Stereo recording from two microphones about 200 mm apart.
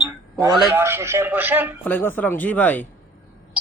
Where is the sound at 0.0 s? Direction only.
15° right (ahead or behind).